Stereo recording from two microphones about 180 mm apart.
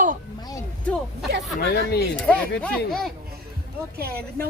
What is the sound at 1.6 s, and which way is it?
Speech, 60° left (ahead or behind).